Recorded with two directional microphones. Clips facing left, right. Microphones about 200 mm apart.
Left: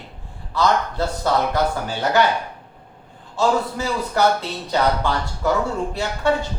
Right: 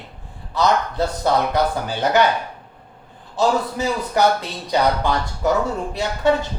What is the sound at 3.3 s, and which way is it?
Speech, 15° right (ahead or behind).